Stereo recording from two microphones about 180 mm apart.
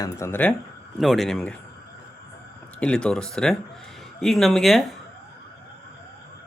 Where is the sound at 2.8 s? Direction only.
5° left (ahead or behind).